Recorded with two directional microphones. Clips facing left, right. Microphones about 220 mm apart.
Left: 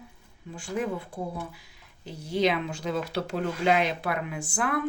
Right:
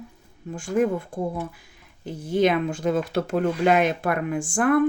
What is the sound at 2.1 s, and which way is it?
Speech, 50° right (ahead or behind).